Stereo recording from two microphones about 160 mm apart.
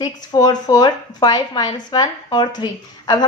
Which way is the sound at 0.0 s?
25° left (ahead or behind).